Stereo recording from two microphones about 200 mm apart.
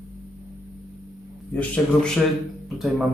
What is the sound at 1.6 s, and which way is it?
Speech, 5° left (ahead or behind).